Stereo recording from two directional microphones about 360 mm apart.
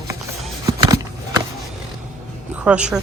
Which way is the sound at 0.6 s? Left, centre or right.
Centre.